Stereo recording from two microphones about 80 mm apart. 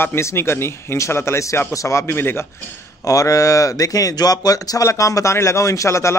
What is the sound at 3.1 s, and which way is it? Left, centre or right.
Speech, left.